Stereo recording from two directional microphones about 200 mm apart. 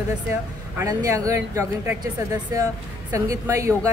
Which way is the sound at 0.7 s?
15° right (ahead or behind).